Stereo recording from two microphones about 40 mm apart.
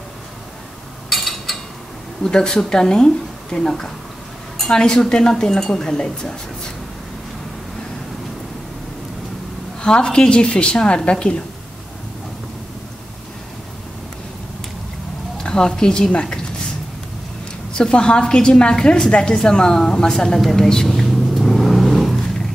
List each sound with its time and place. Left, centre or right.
1.1 s a sound: centre
2.2 s a woman's voice: centre
9.8 s a woman's voice: left
15.3 s a woman's voice: centre
17.7 s a woman's voice: left
21.4 s vehicle: centre